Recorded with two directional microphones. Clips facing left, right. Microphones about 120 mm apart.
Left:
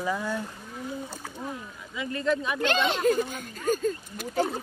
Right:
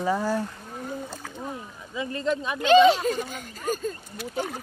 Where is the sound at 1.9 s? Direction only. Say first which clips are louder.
Even; 30° right (ahead or behind).